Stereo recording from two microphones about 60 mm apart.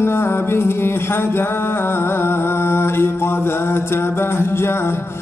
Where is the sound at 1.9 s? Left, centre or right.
Left.